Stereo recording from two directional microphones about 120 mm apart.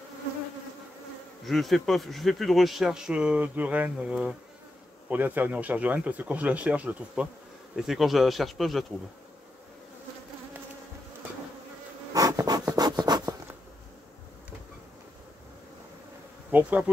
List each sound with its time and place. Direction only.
1.4 s speech: centre (ahead or behind)
12.1 s bee: 30° right (ahead or behind)
12.7 s rub: 35° right (ahead or behind)
16.4 s bee: 15° right (ahead or behind)